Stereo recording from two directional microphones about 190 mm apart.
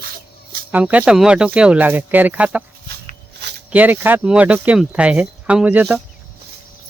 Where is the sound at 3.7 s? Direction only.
10° right (ahead or behind).